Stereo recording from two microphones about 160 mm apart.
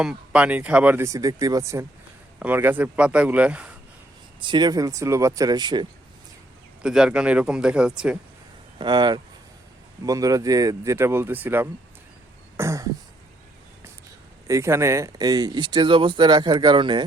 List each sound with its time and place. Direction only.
0.0 s speech: 5° right (ahead or behind)
4.4 s speech: 30° right (ahead or behind)
6.8 s speech: 5° right (ahead or behind)
8.8 s speech: 30° right (ahead or behind); by 11.7 s 10° right (ahead or behind)
12.5 s throat clearing: 20° right (ahead or behind)
14.4 s speech: 20° right (ahead or behind)